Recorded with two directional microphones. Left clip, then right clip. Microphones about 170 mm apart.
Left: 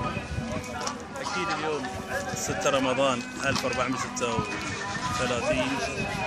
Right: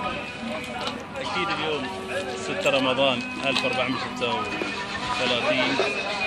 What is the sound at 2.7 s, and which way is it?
Speech, 15° left (ahead or behind).